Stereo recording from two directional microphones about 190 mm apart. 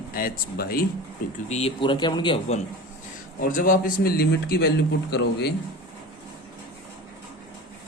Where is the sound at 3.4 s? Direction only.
50° left (ahead or behind).